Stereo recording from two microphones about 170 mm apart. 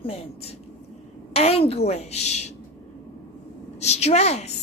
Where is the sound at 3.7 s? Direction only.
40° left (ahead or behind).